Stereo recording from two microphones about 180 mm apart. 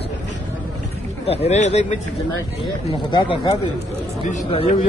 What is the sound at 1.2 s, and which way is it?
Speech, 35° left (ahead or behind).